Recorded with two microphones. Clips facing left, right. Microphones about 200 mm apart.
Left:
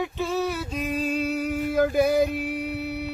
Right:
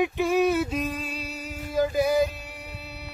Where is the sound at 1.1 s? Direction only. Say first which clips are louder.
Left 11 dB; 55° left (ahead or behind).